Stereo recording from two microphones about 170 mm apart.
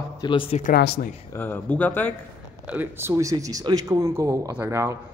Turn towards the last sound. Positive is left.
turn(degrees=-15)  # may be behind; listen again after turning